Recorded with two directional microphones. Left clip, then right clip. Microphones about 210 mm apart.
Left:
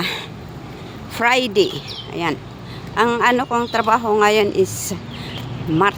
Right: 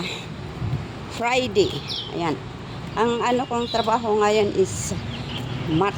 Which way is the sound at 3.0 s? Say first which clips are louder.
Left 5 dB; 10° left (ahead or behind).